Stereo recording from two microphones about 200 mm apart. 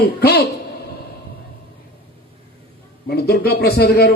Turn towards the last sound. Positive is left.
turn(degrees=50)  # may be behind; listen again after turning